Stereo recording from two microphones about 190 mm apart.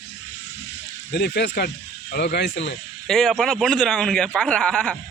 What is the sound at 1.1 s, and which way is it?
Speech, 60° left (ahead or behind).